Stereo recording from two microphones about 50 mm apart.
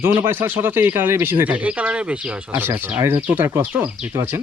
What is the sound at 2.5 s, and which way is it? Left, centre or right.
Speech, right.